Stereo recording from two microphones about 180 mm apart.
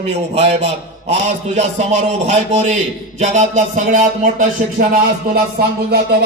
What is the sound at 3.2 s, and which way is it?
Music, 45° right (ahead or behind).